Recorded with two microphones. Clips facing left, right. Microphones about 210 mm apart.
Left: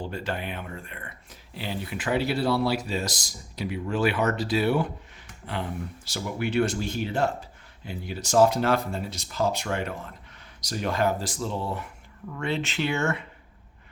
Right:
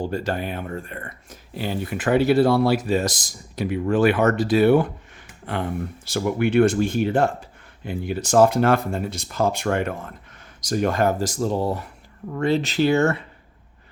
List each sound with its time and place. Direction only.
0.0 s speech: 40° right (ahead or behind)
6.1 s speech: 55° right (ahead or behind); by 13.2 s 35° right (ahead or behind)